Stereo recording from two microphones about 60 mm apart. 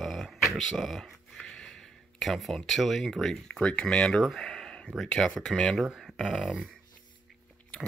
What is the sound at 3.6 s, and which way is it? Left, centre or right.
Speech, centre.